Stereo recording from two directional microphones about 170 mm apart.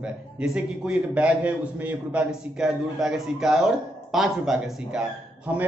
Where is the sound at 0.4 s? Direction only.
5° right (ahead or behind).